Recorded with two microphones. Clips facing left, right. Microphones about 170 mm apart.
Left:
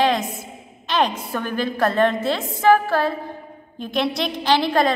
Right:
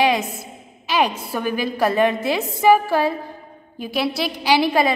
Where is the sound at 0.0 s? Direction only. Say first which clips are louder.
Right 1 dB; 10° right (ahead or behind).